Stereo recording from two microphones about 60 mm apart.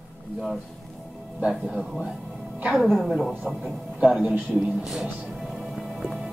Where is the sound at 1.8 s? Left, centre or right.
Centre.